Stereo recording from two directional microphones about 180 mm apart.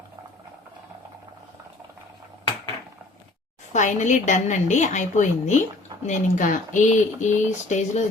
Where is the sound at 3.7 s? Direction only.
40° left (ahead or behind).